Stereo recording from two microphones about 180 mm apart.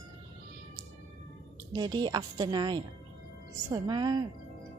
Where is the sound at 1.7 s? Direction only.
25° right (ahead or behind).